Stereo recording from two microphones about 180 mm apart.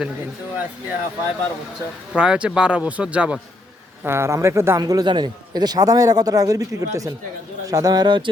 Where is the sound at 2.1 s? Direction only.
5° right (ahead or behind).